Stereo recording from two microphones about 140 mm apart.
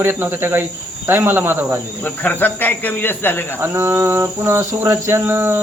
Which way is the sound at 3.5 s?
15° right (ahead or behind).